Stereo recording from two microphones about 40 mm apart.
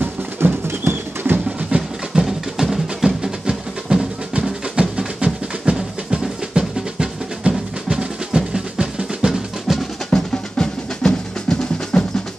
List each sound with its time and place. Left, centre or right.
0.0 s music: right
1.7 s music: right
2.1 s music: centre
9.7 s drum: centre
10.1 s drum: centre